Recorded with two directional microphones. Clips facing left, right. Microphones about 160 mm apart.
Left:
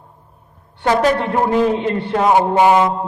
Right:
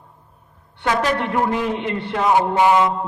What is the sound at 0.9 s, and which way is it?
A man's voice, 35° left (ahead or behind).